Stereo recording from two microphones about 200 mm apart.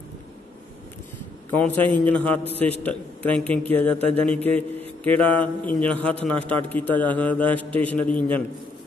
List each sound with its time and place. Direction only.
1.5 s a man's voice: 10° left (ahead or behind)